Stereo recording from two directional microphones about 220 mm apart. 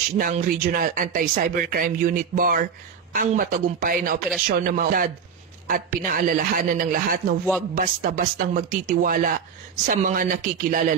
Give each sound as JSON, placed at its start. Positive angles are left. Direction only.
{"t": 0.2, "sound": "speech", "side_deg": -40}